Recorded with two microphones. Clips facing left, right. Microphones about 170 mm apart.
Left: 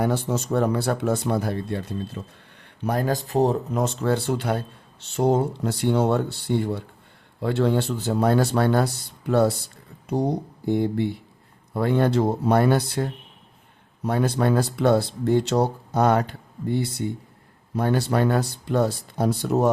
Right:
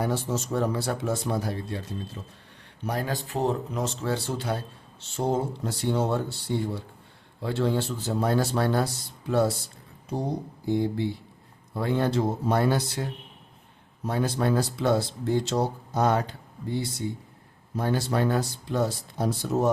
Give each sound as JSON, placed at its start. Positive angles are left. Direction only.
{"t": 0.0, "sound": "speech", "side_deg": 60}
{"t": 2.2, "sound": "speech", "side_deg": 80}
{"t": 2.8, "sound": "speech", "side_deg": 50}
{"t": 3.8, "sound": "speech", "side_deg": 55}
{"t": 10.7, "sound": "speech", "side_deg": 55}